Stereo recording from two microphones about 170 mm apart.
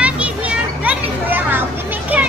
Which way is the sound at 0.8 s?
10° right (ahead or behind).